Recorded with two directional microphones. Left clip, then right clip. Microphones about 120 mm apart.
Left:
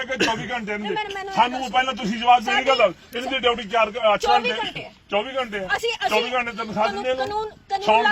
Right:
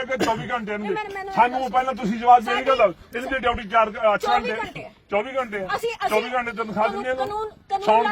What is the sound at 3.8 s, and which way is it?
Speech, 5° left (ahead or behind).